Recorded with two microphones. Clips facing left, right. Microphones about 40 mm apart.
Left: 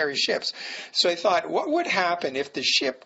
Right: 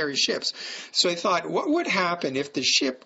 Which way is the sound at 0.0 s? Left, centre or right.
Centre.